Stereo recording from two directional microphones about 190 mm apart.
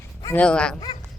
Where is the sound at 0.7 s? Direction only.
20° left (ahead or behind).